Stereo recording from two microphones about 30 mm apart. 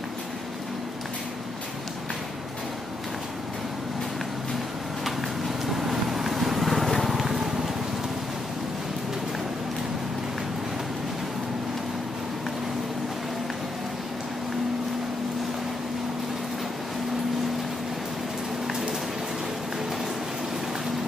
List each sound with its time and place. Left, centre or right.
5.7 s vehicle: centre
7.2 s vehicle: centre
18.7 s a sound: centre